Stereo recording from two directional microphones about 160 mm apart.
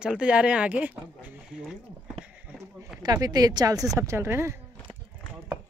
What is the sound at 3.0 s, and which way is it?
Speech, 25° right (ahead or behind).